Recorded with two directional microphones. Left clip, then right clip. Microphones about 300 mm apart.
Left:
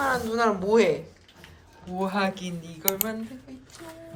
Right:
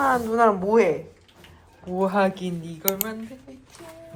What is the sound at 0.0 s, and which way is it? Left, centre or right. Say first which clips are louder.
Speech: right 5 dB; centre.